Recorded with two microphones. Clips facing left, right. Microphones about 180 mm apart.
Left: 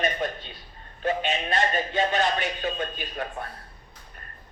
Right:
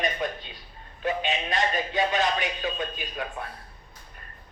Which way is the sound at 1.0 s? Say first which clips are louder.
Left 1 dB; 40° left (ahead or behind).